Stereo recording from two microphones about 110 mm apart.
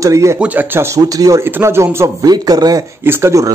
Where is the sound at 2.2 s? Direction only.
35° right (ahead or behind).